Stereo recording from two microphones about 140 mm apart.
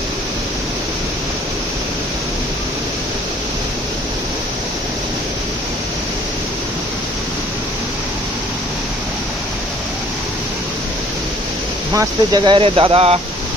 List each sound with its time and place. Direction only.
11.9 s speech: 20° right (ahead or behind)
12.4 s speech: 40° right (ahead or behind)